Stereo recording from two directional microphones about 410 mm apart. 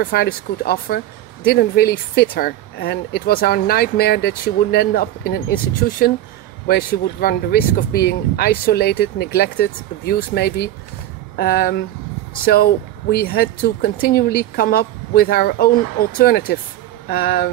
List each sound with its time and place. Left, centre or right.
0.0 s speech: left